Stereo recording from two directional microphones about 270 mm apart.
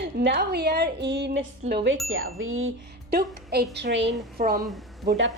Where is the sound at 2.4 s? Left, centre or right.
Right.